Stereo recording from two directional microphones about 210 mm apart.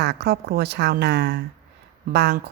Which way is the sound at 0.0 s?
55° right (ahead or behind).